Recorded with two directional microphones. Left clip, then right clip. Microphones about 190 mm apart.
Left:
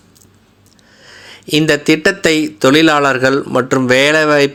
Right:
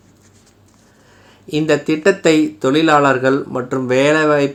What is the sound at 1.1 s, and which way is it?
Speech, 20° left (ahead or behind).